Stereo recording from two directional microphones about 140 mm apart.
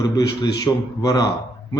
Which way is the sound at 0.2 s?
30° left (ahead or behind).